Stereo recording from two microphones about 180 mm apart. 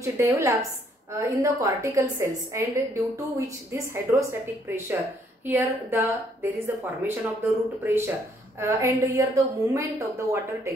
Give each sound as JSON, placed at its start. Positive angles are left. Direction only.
{"t": 0.0, "sound": "a woman's voice", "side_deg": -15}